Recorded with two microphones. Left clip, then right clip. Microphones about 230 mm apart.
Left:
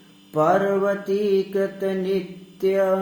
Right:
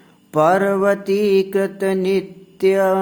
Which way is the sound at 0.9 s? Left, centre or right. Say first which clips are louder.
Right 5 dB; right.